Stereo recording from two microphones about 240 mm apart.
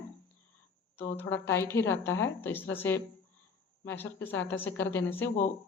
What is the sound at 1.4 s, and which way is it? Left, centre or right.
Speech, centre.